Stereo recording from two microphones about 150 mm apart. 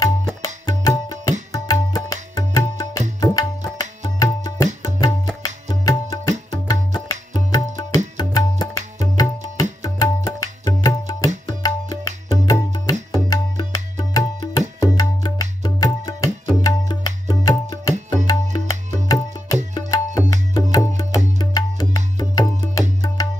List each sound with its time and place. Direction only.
0.7 s tabla: 25° left (ahead or behind)
5.7 s tabla: 25° left (ahead or behind)
12.4 s music: 25° left (ahead or behind)
13.1 s tabla: 25° left (ahead or behind)
18.1 s music: 25° left (ahead or behind)
19.0 s tabla: 25° left (ahead or behind)
20.7 s music: 25° left (ahead or behind)